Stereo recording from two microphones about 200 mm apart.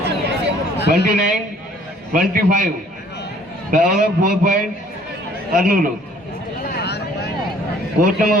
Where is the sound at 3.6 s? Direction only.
45° right (ahead or behind).